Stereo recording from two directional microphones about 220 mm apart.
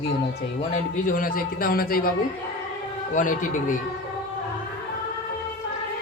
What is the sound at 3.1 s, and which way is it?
Speech, 35° left (ahead or behind).